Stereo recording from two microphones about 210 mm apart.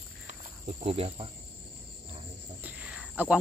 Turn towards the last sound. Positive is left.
turn(degrees=-5)  # may be behind; listen again after turning